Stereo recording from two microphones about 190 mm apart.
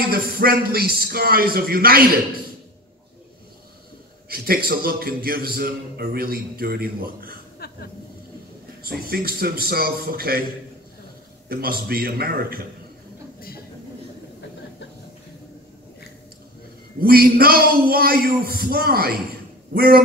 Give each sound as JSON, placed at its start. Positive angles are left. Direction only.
{"t": 0.1, "sound": "a man's voice", "side_deg": -50}
{"t": 4.3, "sound": "a man's voice", "side_deg": -50}
{"t": 7.5, "sound": "a sound", "side_deg": 55}
{"t": 8.8, "sound": "a man's voice", "side_deg": -55}
{"t": 11.4, "sound": "a man's voice", "side_deg": -55}
{"t": 17.0, "sound": "a man's voice", "side_deg": -50}